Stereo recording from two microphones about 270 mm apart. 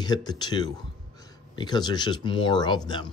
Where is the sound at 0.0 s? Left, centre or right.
Centre.